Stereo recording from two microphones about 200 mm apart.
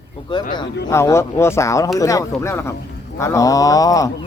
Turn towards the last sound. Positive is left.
turn(degrees=15)  # may be behind; listen again after turning